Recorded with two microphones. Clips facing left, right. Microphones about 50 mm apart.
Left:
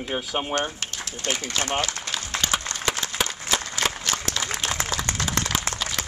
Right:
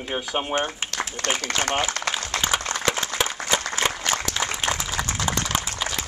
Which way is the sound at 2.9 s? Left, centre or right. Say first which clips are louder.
Right 2 dB; centre.